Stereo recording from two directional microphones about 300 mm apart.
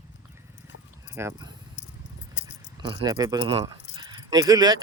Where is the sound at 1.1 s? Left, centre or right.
Centre.